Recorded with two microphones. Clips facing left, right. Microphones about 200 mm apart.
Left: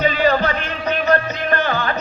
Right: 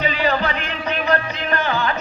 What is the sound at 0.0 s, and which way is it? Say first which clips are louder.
Music: left 4 dB; 40° left (ahead or behind).